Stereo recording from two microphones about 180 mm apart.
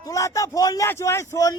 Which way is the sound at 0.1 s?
20° left (ahead or behind).